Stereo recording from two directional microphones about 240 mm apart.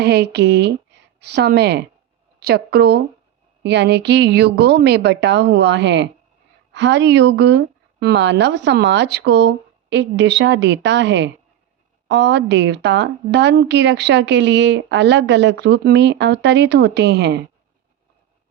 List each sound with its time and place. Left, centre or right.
0.0 s a woman's voice: right